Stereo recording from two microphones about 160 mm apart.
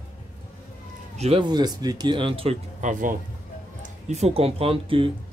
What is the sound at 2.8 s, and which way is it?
Speech, 55° right (ahead or behind).